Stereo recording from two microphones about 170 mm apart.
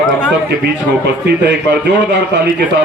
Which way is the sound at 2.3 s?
90° right.